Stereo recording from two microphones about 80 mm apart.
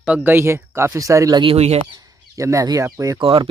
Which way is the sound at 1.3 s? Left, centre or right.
Right.